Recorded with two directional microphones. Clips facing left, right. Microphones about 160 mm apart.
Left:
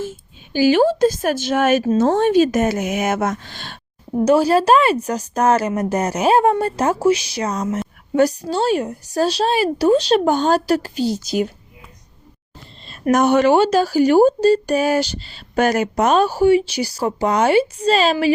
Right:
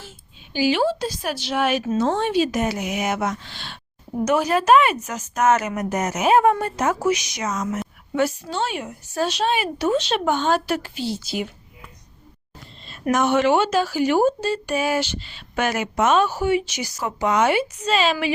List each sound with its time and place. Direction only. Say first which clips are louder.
0.0 s a woman's voice: left 15 dB; 50° left (ahead or behind)
4.3 s speech: left 4 dB; 30° left (ahead or behind)
12.8 s speech: left 5 dB; 40° left (ahead or behind)